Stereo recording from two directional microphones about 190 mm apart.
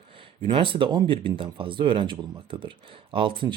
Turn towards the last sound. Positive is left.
turn(degrees=-25)  # may be behind; listen again after turning